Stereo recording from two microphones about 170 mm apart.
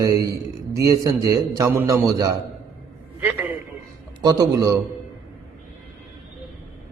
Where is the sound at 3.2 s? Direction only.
10° right (ahead or behind).